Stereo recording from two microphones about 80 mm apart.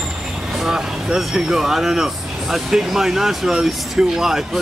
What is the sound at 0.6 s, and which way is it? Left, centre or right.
Speech, centre.